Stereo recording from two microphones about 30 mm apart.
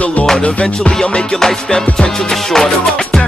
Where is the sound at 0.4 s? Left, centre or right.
Left.